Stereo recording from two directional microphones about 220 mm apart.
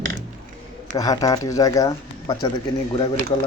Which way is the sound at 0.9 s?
15° left (ahead or behind).